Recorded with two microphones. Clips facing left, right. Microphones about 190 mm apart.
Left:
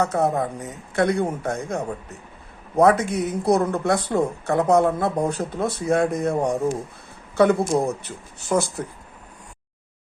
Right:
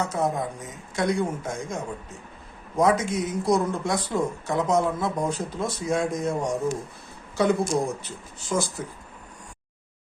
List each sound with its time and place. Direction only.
0.0 s a woman's voice: 60° left (ahead or behind)